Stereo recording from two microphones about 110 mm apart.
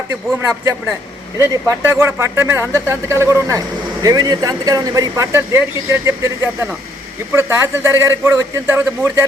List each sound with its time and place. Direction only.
1.4 s speech: 25° right (ahead or behind)